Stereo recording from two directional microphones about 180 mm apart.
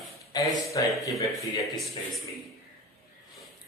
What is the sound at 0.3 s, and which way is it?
Speech, 20° left (ahead or behind).